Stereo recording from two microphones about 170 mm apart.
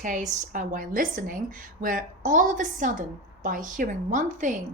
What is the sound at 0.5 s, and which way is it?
A woman's voice, 50° right (ahead or behind).